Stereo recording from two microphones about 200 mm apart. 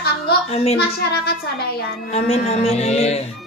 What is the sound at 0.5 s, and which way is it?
Speech, 30° left (ahead or behind).